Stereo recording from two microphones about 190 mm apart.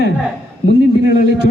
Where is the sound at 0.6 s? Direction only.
55° left (ahead or behind).